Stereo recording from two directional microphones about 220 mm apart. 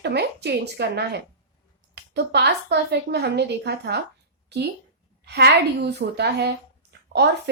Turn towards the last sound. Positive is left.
turn(degrees=-50)  # may be behind; listen again after turning